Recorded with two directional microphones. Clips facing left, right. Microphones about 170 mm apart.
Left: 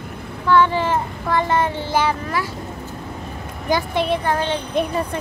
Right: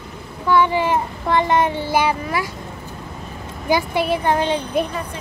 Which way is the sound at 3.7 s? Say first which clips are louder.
Right 1 dB; 10° right (ahead or behind).